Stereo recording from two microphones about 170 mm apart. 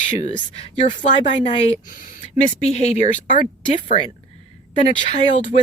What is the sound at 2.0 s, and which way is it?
Speech, 50° left (ahead or behind).